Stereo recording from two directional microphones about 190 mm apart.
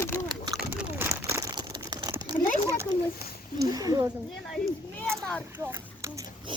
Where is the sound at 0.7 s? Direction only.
5° right (ahead or behind).